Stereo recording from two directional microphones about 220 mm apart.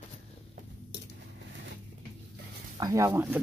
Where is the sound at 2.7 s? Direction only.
15° right (ahead or behind).